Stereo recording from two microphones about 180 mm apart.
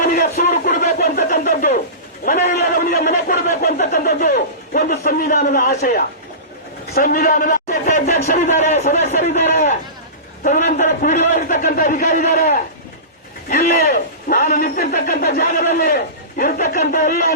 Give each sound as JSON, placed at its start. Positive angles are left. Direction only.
{"t": 0.0, "sound": "a sound", "side_deg": 45}
{"t": 6.9, "sound": "a man's voice", "side_deg": 50}
{"t": 13.7, "sound": "a man's voice", "side_deg": 40}